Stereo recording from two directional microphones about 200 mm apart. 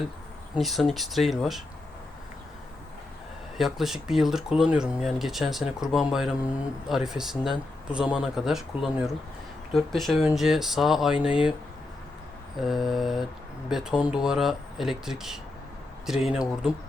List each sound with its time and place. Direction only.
0.5 s speech: centre (ahead or behind)
3.6 s speech: centre (ahead or behind)
12.5 s speech: centre (ahead or behind)